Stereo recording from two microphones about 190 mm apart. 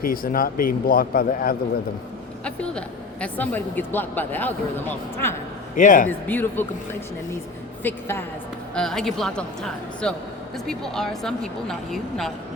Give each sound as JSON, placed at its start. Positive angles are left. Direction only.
{"t": 0.0, "sound": "speech", "side_deg": 50}
{"t": 2.4, "sound": "speech", "side_deg": 5}
{"t": 5.7, "sound": "speech", "side_deg": 45}
{"t": 6.1, "sound": "speech", "side_deg": 10}
{"t": 7.9, "sound": "a woman's voice", "side_deg": 10}